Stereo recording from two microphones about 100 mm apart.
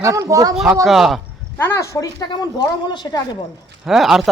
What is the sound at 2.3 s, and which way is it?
Speech, 45° left (ahead or behind).